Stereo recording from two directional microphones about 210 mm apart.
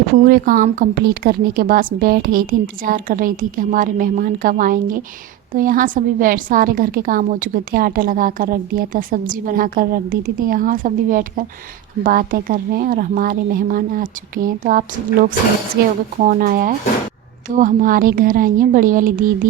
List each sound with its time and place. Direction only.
0.3 s a woman's voice: 45° right (ahead or behind)